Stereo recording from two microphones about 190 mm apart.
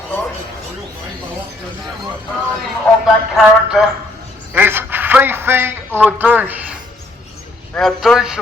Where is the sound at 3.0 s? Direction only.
Centre (ahead or behind).